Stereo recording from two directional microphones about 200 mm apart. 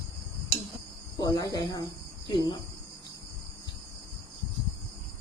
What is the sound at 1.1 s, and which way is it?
Cricket, 20° left (ahead or behind).